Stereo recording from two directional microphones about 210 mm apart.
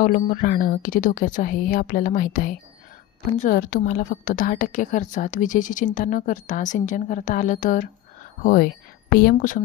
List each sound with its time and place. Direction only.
0.0 s a woman's voice: 40° left (ahead or behind)